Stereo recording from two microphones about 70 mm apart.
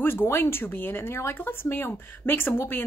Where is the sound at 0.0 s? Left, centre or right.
Left.